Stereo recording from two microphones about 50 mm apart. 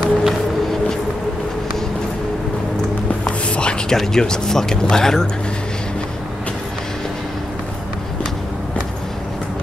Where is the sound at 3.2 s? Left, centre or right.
Left.